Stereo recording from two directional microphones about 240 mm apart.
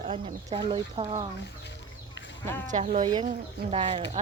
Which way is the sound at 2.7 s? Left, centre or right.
Right.